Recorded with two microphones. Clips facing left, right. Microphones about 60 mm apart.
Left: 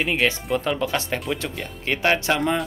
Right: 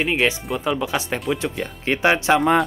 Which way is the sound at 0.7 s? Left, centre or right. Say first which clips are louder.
Right 1 dB; centre.